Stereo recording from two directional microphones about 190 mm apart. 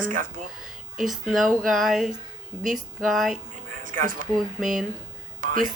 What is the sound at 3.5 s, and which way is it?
Speech, 45° right (ahead or behind).